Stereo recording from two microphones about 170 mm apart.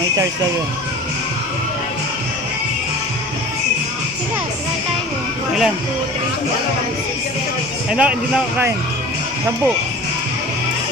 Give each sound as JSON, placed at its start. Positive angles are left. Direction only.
{"t": 7.9, "sound": "speech", "side_deg": -5}